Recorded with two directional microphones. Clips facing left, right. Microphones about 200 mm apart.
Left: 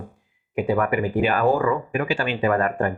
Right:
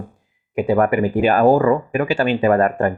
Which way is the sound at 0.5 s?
40° right (ahead or behind).